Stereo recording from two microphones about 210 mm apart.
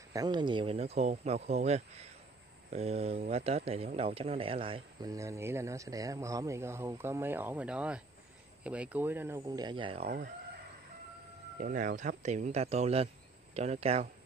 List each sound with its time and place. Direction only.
0.1 s a man's voice: 20° right (ahead or behind)
11.6 s speech: 40° right (ahead or behind)